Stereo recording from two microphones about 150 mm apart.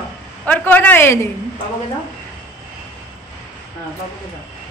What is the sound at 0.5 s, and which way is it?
Speech, 10° left (ahead or behind).